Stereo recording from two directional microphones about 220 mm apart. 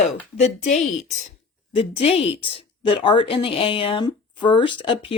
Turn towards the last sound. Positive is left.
turn(degrees=25)  # may be behind; listen again after turning